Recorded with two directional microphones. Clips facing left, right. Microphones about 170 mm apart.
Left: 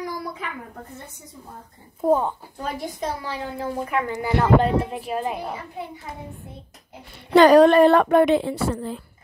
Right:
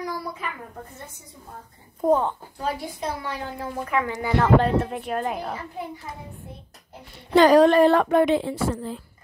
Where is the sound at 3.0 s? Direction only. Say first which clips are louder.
Even; 35° left (ahead or behind).